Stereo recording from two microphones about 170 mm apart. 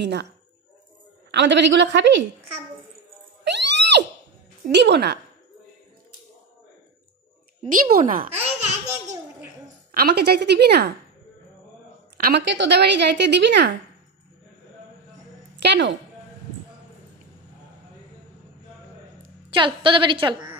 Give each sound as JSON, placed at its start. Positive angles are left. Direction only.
{"t": 0.0, "sound": "a woman's voice", "side_deg": -90}
{"t": 1.3, "sound": "a woman's voice", "side_deg": -90}
{"t": 3.4, "sound": "music", "side_deg": -90}
{"t": 4.6, "sound": "speech", "side_deg": -85}
{"t": 7.7, "sound": "speech", "side_deg": -55}
{"t": 8.3, "sound": "laughter", "side_deg": -35}
{"t": 9.9, "sound": "a woman's voice", "side_deg": -65}
{"t": 12.2, "sound": "a woman's voice", "side_deg": -75}
{"t": 15.5, "sound": "a woman's voice", "side_deg": -90}
{"t": 19.2, "sound": "a woman's voice", "side_deg": -30}